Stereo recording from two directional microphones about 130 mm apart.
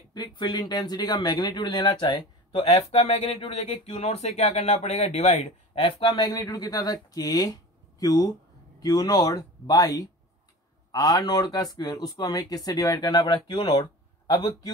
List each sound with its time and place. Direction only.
0.1 s speech: 35° left (ahead or behind)
2.6 s speech: 55° left (ahead or behind)
5.8 s speech: 40° left (ahead or behind)